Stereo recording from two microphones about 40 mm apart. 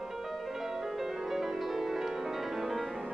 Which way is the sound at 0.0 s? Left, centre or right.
Centre.